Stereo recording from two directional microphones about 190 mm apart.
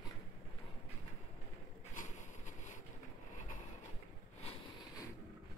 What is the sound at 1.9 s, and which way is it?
Vehicle, 40° left (ahead or behind).